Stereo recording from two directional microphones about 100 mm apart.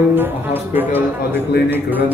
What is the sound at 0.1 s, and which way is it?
A man's voice, 20° right (ahead or behind).